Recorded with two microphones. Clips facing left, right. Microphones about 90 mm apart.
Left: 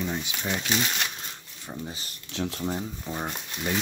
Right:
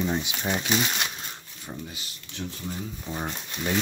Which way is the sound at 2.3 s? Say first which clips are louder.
Left 6 dB; 75° left (ahead or behind).